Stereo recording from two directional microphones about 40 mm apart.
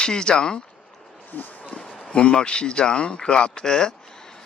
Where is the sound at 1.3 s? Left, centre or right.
Left.